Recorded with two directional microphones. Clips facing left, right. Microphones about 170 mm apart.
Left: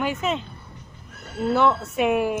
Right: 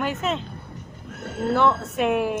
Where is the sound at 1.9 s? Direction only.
Centre (ahead or behind).